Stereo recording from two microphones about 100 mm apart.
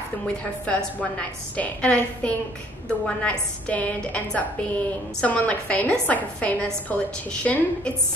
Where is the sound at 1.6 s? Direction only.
10° left (ahead or behind).